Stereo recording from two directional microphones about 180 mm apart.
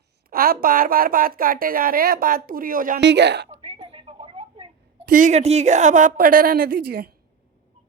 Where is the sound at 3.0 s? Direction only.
75° right (ahead or behind).